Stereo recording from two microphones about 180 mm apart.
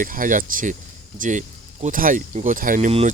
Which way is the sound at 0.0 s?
50° right (ahead or behind).